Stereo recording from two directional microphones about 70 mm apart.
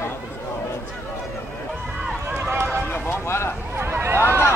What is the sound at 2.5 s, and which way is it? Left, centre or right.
Run, right.